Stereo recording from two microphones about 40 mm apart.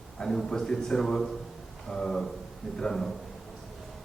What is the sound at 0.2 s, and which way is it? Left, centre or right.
A man's voice, centre.